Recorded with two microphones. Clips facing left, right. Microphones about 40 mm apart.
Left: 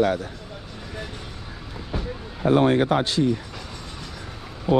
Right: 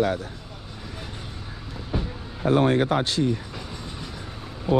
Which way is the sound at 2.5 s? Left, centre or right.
Left.